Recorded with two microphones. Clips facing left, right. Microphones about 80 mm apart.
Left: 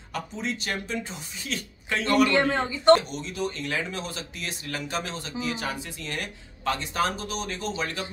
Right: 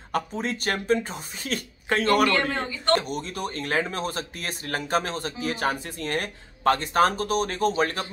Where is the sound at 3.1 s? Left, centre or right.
Right.